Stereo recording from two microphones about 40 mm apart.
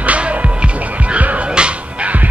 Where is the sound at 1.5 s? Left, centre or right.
Right.